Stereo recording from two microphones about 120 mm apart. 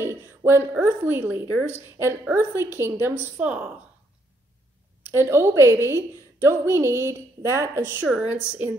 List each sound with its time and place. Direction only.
0.0 s a woman's voice: 20° right (ahead or behind)
5.0 s a woman's voice: 20° right (ahead or behind)